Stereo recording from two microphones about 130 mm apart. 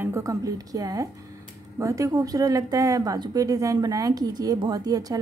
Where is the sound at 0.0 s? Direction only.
25° right (ahead or behind).